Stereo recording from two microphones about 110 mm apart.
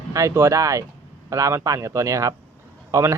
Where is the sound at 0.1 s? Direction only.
30° right (ahead or behind).